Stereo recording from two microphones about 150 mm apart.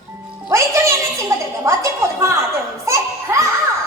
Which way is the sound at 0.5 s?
20° right (ahead or behind).